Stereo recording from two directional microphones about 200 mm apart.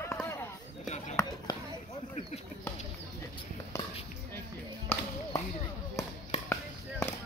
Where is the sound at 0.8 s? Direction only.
35° left (ahead or behind).